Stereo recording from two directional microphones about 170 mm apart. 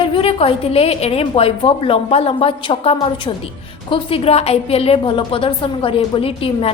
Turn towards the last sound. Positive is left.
turn(degrees=35)  # may be behind; listen again after turning